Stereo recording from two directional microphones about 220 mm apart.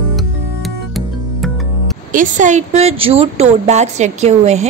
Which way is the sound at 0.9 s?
Centre (ahead or behind).